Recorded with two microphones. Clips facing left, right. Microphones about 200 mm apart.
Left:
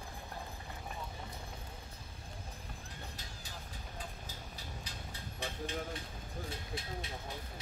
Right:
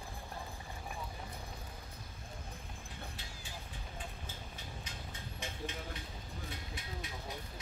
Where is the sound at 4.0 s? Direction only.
40° left (ahead or behind).